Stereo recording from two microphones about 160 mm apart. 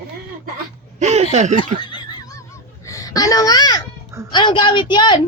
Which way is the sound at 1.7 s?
30° left (ahead or behind).